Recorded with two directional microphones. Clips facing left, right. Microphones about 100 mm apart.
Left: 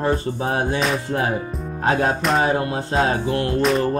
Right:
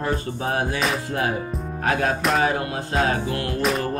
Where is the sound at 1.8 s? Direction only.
25° left (ahead or behind).